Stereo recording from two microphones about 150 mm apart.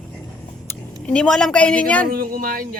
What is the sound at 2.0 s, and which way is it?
Speech, 70° right (ahead or behind).